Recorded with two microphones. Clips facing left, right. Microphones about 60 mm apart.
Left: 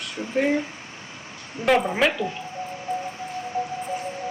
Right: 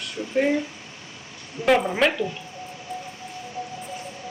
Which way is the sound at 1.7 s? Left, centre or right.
Centre.